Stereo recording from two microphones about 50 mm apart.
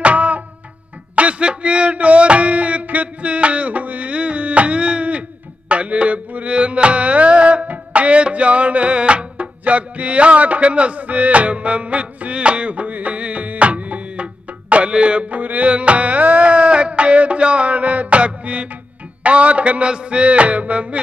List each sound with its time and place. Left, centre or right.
0.0 s music: right
1.1 s speech: right
5.7 s music: right